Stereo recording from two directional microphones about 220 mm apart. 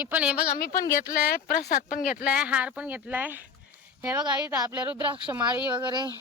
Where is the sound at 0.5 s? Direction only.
40° left (ahead or behind).